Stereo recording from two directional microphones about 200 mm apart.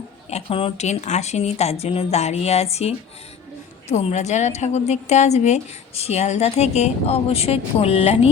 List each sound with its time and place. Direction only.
0.3 s a woman's voice: 30° left (ahead or behind)